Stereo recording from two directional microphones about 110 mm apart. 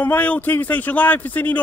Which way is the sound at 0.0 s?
15° left (ahead or behind).